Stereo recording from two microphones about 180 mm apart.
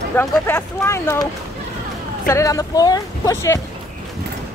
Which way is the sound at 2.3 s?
15° left (ahead or behind).